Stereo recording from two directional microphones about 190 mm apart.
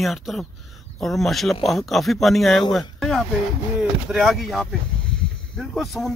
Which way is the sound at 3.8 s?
5° right (ahead or behind).